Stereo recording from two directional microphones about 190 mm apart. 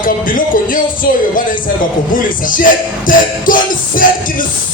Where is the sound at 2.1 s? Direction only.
45° left (ahead or behind).